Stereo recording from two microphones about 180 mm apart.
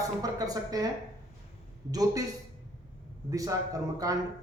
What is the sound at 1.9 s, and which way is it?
Speech, 20° right (ahead or behind).